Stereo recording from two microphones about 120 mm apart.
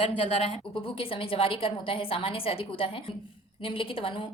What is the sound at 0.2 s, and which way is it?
A woman's voice, 55° left (ahead or behind).